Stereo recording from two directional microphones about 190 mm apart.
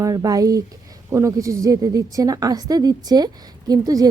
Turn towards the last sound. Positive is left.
turn(degrees=-20)  # may be behind; listen again after turning